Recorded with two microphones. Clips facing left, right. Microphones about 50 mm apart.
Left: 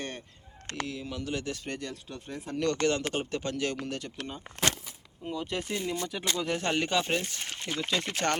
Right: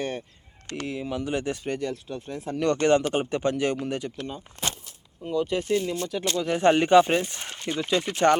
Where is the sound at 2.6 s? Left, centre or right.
Right.